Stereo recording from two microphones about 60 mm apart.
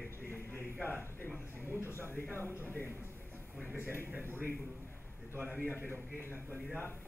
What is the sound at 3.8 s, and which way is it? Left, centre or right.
Speech, left.